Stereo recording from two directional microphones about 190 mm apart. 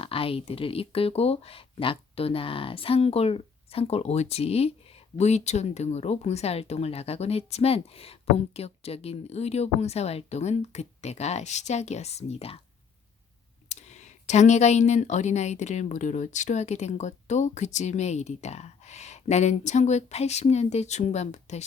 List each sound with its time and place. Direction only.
0.0 s speech: 30° left (ahead or behind)
13.7 s speech: 35° left (ahead or behind)